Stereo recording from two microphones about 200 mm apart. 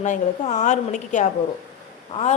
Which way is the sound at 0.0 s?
35° left (ahead or behind).